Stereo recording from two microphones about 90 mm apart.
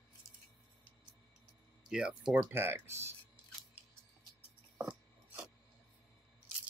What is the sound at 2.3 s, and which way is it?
Speech, 25° right (ahead or behind).